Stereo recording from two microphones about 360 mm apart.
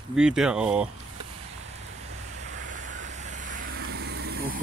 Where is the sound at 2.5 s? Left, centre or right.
Right.